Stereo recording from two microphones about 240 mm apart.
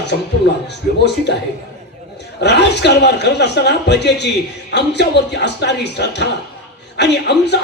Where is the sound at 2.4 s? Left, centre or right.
Left.